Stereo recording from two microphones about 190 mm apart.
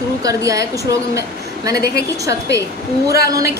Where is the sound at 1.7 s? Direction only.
55° left (ahead or behind).